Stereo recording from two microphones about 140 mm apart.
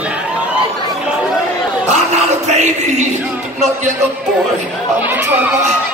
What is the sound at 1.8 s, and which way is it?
Speech, 50° right (ahead or behind).